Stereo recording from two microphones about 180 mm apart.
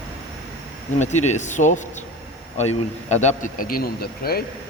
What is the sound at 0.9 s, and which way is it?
A man's voice, 40° left (ahead or behind).